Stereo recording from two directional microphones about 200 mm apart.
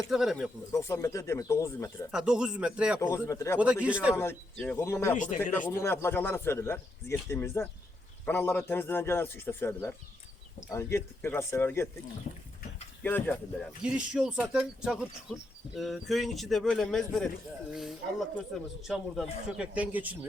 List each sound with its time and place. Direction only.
0.1 s speech: centre (ahead or behind)
0.7 s speech: 15° left (ahead or behind)
2.0 s speech: 5° right (ahead or behind)
3.0 s speech: 15° left (ahead or behind)
3.6 s speech: 5° right (ahead or behind)
4.1 s speech: 10° left (ahead or behind)
5.1 s speech: 40° left (ahead or behind)
5.6 s speech: 15° left (ahead or behind)
13.0 s speech: 10° left (ahead or behind)
13.8 s speech: 5° right (ahead or behind)